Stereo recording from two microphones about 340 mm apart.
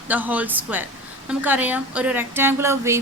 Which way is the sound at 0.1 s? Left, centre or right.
Centre.